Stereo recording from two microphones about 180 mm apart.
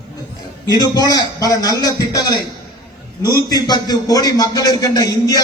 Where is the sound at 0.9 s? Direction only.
20° left (ahead or behind).